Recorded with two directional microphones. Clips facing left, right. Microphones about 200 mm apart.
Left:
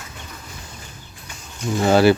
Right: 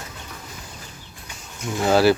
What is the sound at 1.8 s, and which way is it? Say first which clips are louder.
Speech: left 2 dB; centre (ahead or behind).